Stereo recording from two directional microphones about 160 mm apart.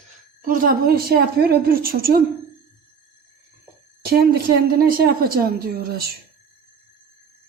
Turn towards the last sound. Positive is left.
turn(degrees=-70)  # may be behind; listen again after turning